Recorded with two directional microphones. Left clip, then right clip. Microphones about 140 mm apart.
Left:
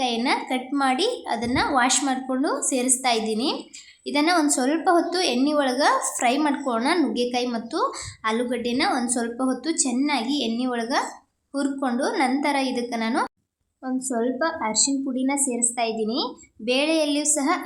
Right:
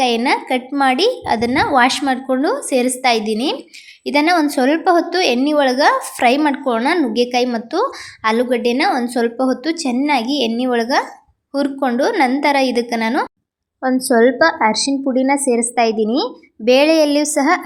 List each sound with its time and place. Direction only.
0.3 s speech: 35° right (ahead or behind)
13.8 s speech: 45° right (ahead or behind)